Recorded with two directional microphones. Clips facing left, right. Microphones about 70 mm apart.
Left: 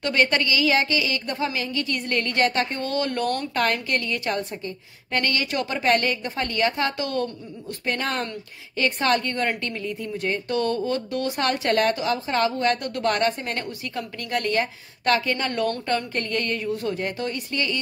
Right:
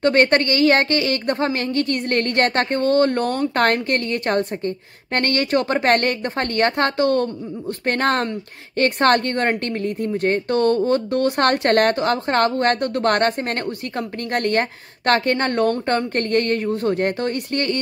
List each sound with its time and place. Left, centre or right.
0.0 s a woman's voice: right